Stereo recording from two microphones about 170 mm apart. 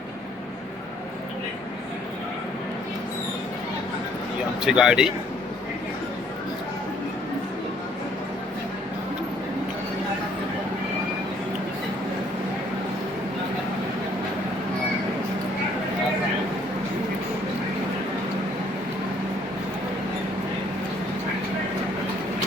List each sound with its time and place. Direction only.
4.6 s speech: 5° right (ahead or behind)